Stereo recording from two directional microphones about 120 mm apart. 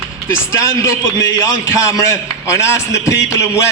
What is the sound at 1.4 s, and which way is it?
A man's voice, 25° left (ahead or behind).